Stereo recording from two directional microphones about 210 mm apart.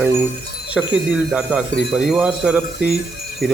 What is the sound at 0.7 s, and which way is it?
Speech, 5° right (ahead or behind).